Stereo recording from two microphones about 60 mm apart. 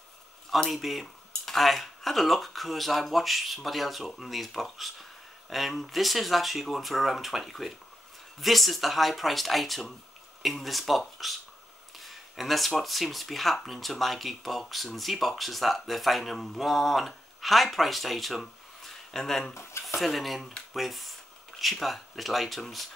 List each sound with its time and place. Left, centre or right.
0.7 s speech: centre
19.5 s speech: left
20.0 s speech: centre